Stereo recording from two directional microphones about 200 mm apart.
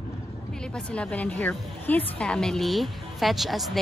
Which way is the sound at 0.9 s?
5° left (ahead or behind).